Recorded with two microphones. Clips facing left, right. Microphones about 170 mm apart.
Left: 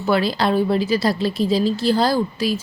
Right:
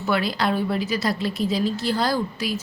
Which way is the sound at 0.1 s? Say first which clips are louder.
Left 4 dB; 30° left (ahead or behind).